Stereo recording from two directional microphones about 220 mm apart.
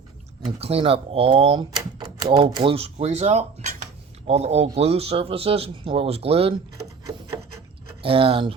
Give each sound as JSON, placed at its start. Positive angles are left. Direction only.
{"t": 0.4, "sound": "speech", "side_deg": -25}
{"t": 8.0, "sound": "speech", "side_deg": -25}